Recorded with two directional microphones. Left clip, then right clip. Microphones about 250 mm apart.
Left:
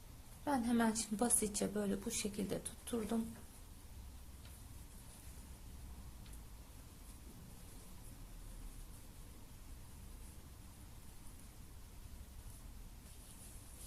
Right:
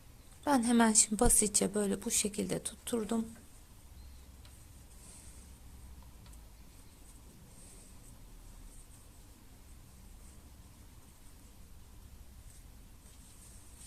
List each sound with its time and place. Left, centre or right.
0.4 s a woman's voice: right